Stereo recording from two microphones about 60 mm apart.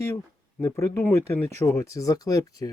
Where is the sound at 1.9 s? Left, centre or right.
Left.